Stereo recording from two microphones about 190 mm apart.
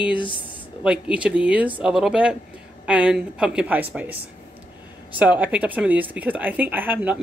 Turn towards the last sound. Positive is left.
turn(degrees=-10)  # may be behind; listen again after turning